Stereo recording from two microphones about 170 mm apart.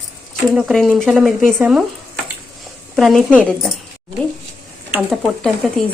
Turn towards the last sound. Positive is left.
turn(degrees=0)  # may be behind; listen again after turning